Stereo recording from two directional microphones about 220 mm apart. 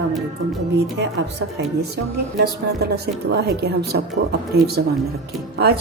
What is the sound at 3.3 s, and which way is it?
Speech, 45° right (ahead or behind).